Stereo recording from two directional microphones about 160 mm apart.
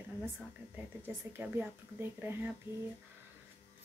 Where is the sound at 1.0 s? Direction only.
15° right (ahead or behind).